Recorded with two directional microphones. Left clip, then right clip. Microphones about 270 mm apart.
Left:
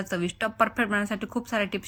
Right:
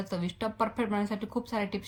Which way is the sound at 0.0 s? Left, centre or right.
Centre.